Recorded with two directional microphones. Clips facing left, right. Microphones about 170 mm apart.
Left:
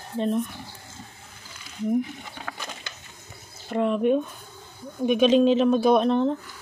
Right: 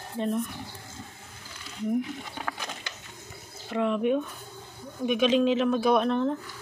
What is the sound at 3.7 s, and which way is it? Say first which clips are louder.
Speech: left 3 dB; 45° left (ahead or behind).